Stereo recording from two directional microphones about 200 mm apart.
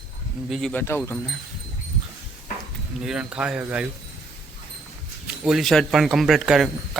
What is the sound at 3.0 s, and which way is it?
Speech, 5° right (ahead or behind).